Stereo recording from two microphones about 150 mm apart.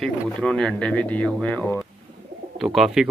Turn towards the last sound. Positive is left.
turn(degrees=0)  # may be behind; listen again after turning